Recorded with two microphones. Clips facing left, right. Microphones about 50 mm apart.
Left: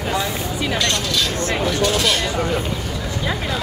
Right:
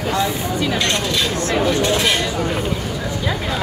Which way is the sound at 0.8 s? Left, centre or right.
Right.